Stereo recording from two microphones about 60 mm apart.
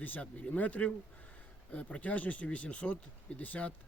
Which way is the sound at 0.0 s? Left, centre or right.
Left.